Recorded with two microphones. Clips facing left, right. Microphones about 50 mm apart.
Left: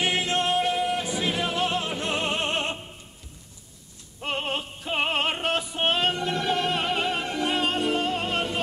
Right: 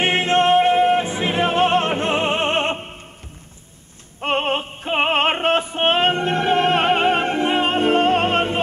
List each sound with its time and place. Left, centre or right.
0.0 s music: right
4.2 s music: right